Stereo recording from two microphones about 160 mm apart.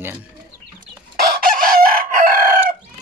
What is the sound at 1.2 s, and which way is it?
Chicken, 65° right (ahead or behind).